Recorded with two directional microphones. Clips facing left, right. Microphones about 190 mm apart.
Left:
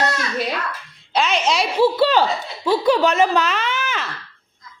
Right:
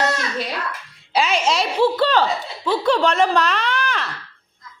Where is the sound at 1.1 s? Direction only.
5° right (ahead or behind).